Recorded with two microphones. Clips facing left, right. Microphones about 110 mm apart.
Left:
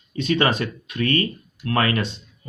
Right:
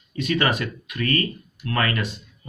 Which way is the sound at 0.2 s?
25° left (ahead or behind).